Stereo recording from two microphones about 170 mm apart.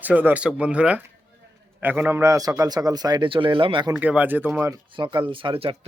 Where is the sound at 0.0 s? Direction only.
10° right (ahead or behind); by 3.9 s 30° right (ahead or behind).